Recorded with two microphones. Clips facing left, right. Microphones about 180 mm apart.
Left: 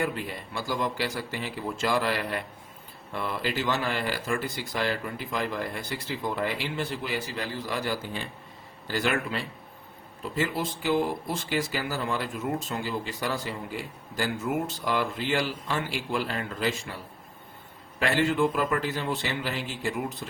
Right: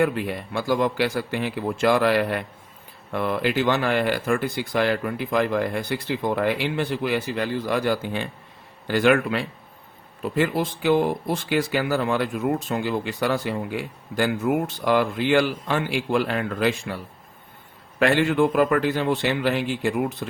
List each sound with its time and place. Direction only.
0.0 s speech: 60° right (ahead or behind)
18.0 s speech: 60° right (ahead or behind)